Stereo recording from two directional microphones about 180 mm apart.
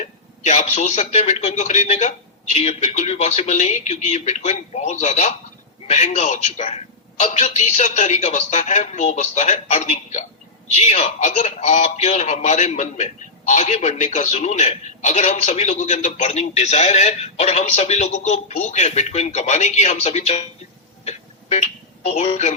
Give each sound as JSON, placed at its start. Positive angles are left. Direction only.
{"t": 0.0, "sound": "speech", "side_deg": 40}
{"t": 21.0, "sound": "music", "side_deg": 35}
{"t": 22.0, "sound": "speech", "side_deg": 40}